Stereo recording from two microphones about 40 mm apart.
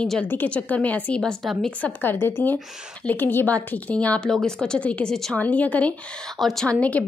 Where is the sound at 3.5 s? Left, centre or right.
Left.